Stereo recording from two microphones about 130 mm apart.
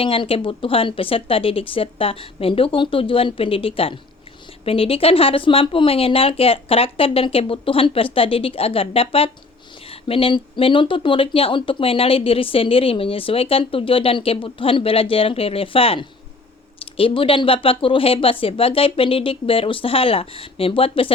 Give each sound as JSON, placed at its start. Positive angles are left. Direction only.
{"t": 0.0, "sound": "speech", "side_deg": 45}